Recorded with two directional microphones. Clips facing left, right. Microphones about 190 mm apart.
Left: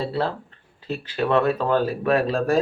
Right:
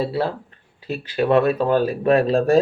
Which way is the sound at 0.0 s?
10° right (ahead or behind).